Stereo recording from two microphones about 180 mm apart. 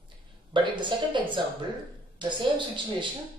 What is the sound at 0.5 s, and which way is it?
Speech, 25° right (ahead or behind).